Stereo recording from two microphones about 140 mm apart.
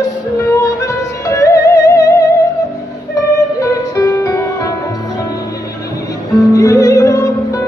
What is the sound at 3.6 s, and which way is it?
Music, 25° left (ahead or behind).